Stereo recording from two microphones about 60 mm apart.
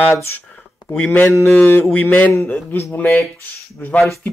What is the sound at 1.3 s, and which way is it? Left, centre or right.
A man's voice, left.